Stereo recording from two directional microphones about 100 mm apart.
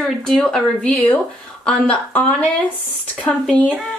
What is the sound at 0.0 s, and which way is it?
Speech, 5° left (ahead or behind).